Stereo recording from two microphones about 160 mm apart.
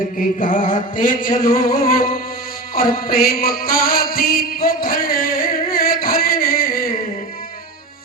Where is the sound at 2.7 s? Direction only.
65° left (ahead or behind).